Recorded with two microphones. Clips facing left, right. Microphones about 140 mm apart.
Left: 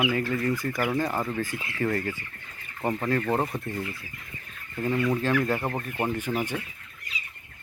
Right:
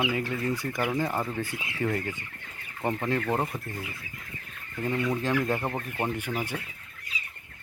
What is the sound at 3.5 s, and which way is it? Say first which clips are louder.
Speech: left 4 dB; 20° left (ahead or behind).